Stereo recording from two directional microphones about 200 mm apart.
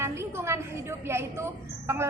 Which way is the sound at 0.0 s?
15° right (ahead or behind).